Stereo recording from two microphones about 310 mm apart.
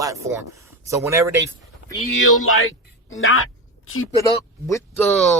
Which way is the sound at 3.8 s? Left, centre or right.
Left.